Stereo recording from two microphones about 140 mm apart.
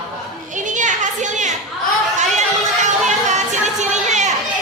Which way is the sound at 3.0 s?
55° right (ahead or behind).